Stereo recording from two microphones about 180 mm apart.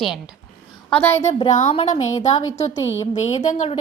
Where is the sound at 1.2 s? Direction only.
40° left (ahead or behind).